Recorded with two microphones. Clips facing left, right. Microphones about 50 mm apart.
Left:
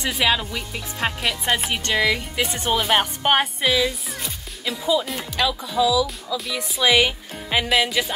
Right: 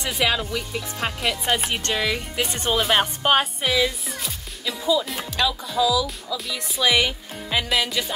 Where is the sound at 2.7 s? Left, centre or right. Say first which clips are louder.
Even; centre.